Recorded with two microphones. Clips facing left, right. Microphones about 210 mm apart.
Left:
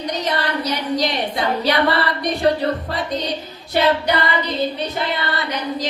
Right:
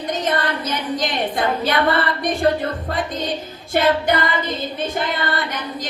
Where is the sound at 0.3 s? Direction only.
50° right (ahead or behind).